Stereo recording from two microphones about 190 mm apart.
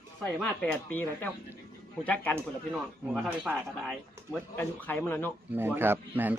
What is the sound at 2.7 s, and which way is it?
Speech, 5° right (ahead or behind).